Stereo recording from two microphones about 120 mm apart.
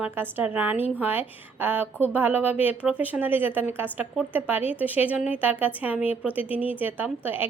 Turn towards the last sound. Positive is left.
turn(degrees=-15)  # may be behind; listen again after turning